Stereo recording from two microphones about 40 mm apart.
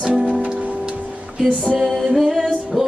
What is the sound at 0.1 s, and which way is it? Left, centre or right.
Music, right.